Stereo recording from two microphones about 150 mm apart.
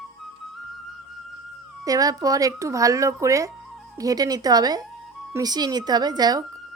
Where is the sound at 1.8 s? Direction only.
25° right (ahead or behind).